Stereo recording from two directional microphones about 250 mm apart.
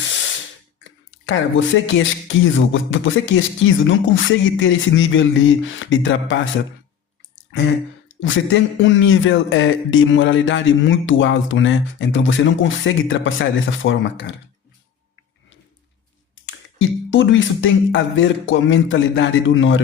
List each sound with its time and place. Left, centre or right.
0.9 s speech: left
8.2 s speech: left
16.3 s speech: left